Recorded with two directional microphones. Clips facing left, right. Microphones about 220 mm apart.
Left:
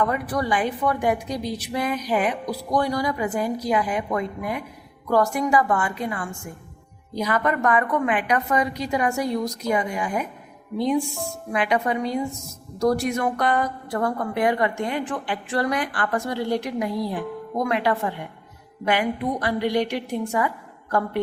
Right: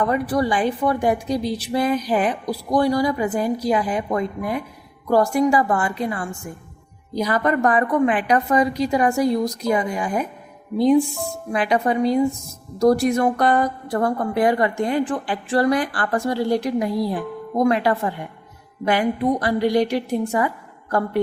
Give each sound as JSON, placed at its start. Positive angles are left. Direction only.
{"t": 0.0, "sound": "a woman's voice", "side_deg": -30}